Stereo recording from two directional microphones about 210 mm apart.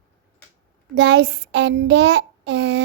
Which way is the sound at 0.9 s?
50° right (ahead or behind).